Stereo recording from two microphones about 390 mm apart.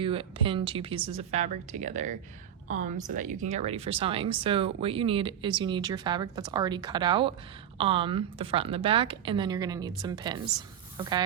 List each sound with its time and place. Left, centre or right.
0.0 s a woman's voice: centre